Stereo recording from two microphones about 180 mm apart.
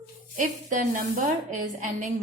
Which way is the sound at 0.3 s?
45° right (ahead or behind).